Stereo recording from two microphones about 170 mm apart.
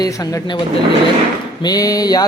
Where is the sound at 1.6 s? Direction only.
20° left (ahead or behind).